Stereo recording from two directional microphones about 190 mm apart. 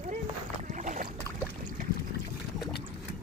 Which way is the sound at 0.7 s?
40° right (ahead or behind).